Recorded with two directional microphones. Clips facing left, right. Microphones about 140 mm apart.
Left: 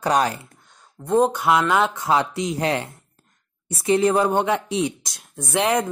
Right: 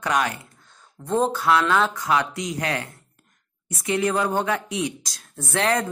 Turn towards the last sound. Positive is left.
turn(degrees=15)  # may be behind; listen again after turning